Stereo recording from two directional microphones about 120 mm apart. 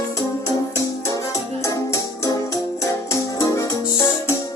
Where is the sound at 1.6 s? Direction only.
25° left (ahead or behind).